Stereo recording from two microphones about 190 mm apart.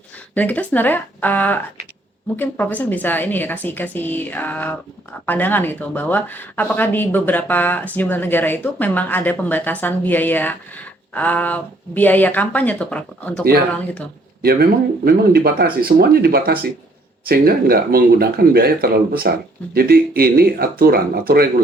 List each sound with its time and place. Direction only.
0.3 s speech: 10° left (ahead or behind)
14.4 s speech: 55° right (ahead or behind)